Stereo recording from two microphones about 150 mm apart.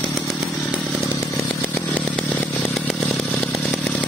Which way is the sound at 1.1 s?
10° left (ahead or behind).